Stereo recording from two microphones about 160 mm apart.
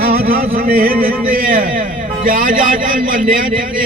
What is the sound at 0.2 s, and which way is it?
A man's voice, 65° right (ahead or behind).